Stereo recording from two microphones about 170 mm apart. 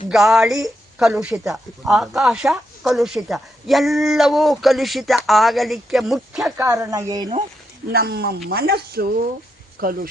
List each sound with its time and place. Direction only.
0.1 s a woman's voice: centre (ahead or behind)
6.6 s speech: 20° right (ahead or behind)
7.9 s speech: 65° right (ahead or behind)